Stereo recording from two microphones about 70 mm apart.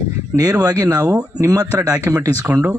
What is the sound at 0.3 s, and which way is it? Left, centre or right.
Speech, right.